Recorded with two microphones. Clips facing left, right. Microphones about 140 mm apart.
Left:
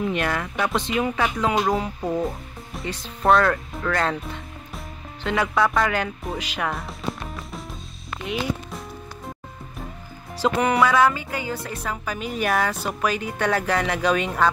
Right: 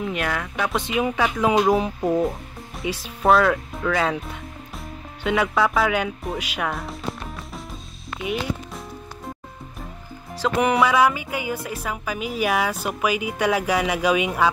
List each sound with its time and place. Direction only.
0.0 s speech: 5° right (ahead or behind)
1.0 s speech: 10° right (ahead or behind)
1.6 s music: 20° right (ahead or behind)
2.2 s speech: centre (ahead or behind)
10.6 s speech: 15° right (ahead or behind)